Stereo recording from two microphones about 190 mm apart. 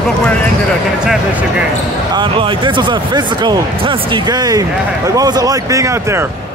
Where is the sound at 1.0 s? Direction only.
5° right (ahead or behind).